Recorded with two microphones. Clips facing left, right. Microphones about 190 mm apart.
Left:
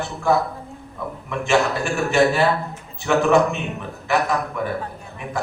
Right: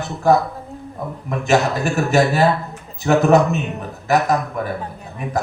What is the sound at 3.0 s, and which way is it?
A man's voice, 40° right (ahead or behind).